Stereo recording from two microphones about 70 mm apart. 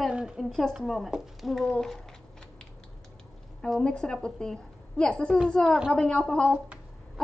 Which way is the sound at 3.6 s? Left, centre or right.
Centre.